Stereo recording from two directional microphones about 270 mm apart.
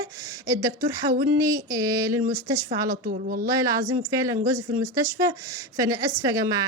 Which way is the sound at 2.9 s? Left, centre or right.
Right.